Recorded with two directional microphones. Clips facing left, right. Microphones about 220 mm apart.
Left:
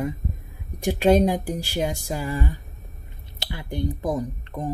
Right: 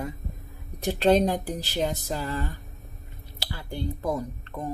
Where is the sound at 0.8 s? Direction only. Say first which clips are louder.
Left 3 dB; 10° left (ahead or behind).